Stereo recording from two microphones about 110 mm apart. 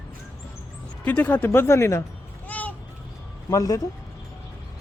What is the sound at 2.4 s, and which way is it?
Vehicle, 15° left (ahead or behind).